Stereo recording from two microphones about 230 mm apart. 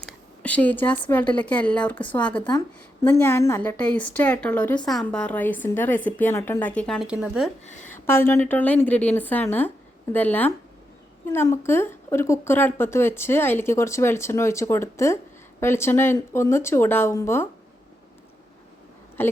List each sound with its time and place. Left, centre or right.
0.0 s a woman's voice: centre
7.7 s speech: left
8.0 s a woman's voice: centre
19.2 s speech: centre